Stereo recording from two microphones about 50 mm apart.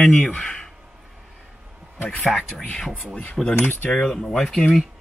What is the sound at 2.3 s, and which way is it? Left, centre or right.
Speech, centre.